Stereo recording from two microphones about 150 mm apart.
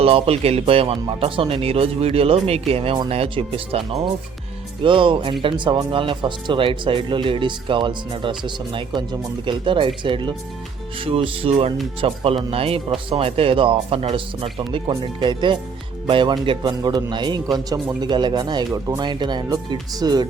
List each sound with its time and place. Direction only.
0.0 s a man's voice: 40° right (ahead or behind)